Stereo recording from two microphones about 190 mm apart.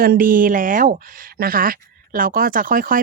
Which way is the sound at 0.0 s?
50° right (ahead or behind).